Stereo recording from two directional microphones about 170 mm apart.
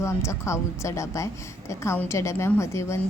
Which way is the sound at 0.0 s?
15° left (ahead or behind).